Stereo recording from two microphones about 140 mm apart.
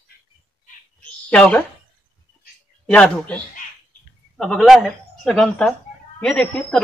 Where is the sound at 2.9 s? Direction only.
5° left (ahead or behind).